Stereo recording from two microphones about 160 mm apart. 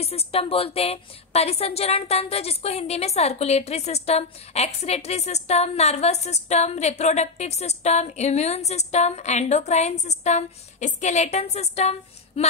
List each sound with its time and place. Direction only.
0.0 s a woman's voice: 40° left (ahead or behind)